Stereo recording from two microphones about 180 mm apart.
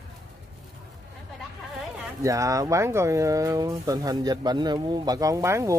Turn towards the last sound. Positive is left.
turn(degrees=-15)  # may be behind; listen again after turning